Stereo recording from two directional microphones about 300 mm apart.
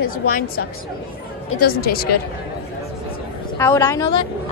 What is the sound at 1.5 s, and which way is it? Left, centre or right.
Speech, left.